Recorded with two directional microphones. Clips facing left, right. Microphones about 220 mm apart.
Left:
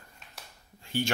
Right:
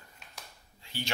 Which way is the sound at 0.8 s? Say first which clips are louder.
Left 9 dB; 50° left (ahead or behind).